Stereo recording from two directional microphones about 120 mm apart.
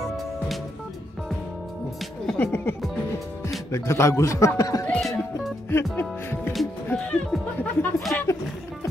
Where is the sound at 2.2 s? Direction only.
15° left (ahead or behind).